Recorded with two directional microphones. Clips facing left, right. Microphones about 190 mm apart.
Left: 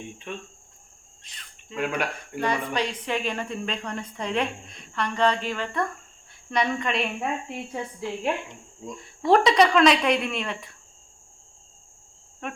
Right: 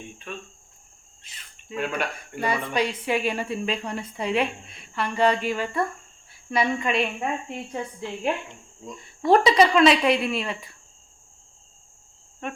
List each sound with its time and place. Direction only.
0.3 s cricket: 20° left (ahead or behind)
1.2 s cricket: 5° right (ahead or behind)
1.8 s speech: 10° left (ahead or behind)
2.4 s a woman's voice: 10° right (ahead or behind)
8.9 s speech: centre (ahead or behind)
12.4 s speech: centre (ahead or behind)